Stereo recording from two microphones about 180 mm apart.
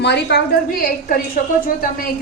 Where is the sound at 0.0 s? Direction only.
70° left (ahead or behind).